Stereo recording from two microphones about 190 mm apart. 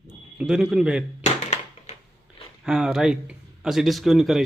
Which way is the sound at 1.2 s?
35° left (ahead or behind).